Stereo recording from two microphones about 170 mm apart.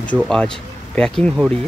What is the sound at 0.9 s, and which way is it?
Speech, 5° left (ahead or behind).